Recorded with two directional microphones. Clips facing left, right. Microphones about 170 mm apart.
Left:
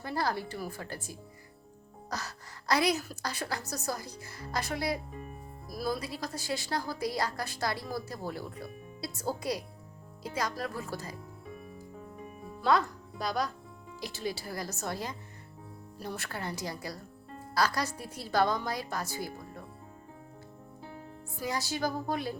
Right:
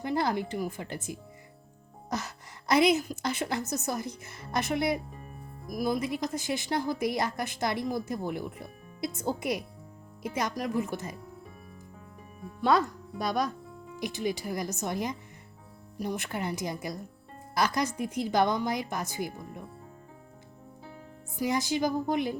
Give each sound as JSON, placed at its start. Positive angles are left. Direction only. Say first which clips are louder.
{"t": 0.0, "sound": "speech", "louder": "right 4 dB", "side_deg": -20}
{"t": 12.6, "sound": "speech", "louder": "right 2 dB", "side_deg": -20}
{"t": 21.3, "sound": "speech", "louder": "right 6 dB", "side_deg": -20}